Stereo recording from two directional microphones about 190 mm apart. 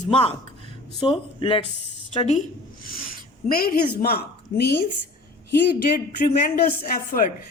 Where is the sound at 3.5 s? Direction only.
50° left (ahead or behind).